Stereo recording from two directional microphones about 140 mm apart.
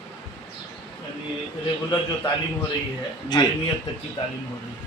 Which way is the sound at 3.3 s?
30° left (ahead or behind).